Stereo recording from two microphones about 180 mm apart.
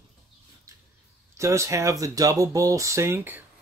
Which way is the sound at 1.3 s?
15° right (ahead or behind).